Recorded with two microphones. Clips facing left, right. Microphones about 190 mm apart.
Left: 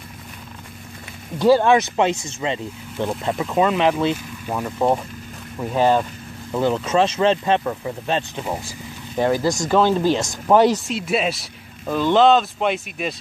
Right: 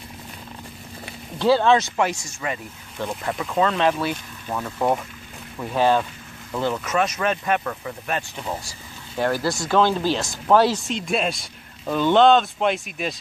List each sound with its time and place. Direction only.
1.4 s speech: 10° left (ahead or behind)
10.9 s speech: 5° left (ahead or behind)